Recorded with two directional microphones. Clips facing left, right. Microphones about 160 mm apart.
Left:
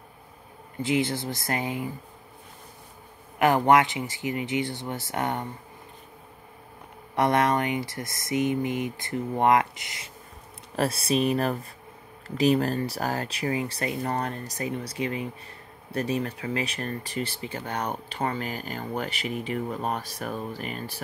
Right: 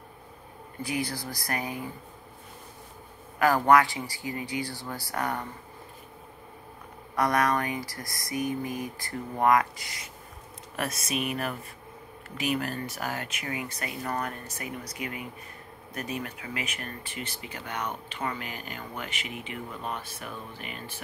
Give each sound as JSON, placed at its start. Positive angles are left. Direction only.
{"t": 0.8, "sound": "speech", "side_deg": 25}
{"t": 3.3, "sound": "speech", "side_deg": 20}
{"t": 7.2, "sound": "speech", "side_deg": 25}